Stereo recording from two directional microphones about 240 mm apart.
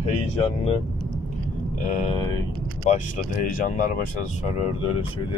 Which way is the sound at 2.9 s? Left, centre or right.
Left.